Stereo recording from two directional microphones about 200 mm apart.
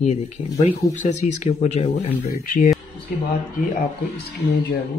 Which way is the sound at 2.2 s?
45° left (ahead or behind).